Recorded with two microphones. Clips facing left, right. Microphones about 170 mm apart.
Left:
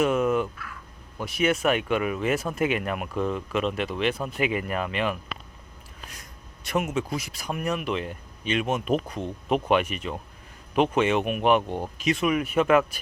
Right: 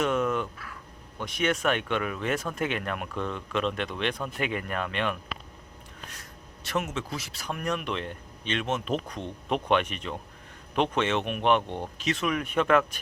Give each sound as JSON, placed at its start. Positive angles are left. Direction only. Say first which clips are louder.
{"t": 0.0, "sound": "a sound", "louder": "left 4 dB", "side_deg": 10}
{"t": 1.2, "sound": "speech", "louder": "left 3 dB", "side_deg": 5}
{"t": 6.7, "sound": "speech", "louder": "left 4 dB", "side_deg": 10}